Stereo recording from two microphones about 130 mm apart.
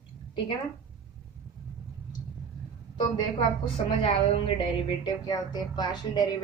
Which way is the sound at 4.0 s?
40° left (ahead or behind).